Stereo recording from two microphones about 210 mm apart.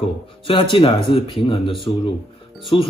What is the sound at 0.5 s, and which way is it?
Speech, 25° left (ahead or behind).